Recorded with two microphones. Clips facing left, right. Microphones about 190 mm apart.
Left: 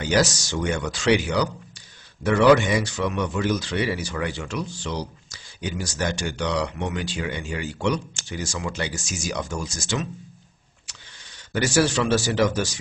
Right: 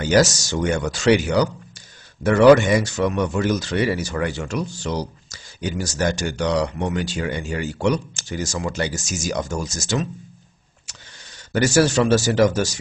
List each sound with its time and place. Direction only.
0.0 s speech: 45° right (ahead or behind)
11.5 s speech: 45° right (ahead or behind)